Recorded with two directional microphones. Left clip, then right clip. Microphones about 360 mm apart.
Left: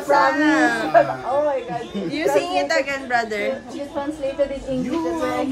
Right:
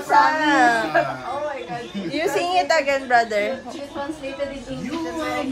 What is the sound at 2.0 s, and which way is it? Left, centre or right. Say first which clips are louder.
Speech: left 2 dB; centre.